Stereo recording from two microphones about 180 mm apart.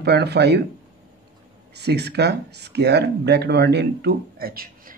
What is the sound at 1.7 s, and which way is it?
Speech, 65° right (ahead or behind).